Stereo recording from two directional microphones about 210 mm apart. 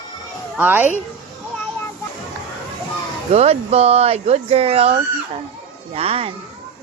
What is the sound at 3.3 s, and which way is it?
Speech, 30° right (ahead or behind).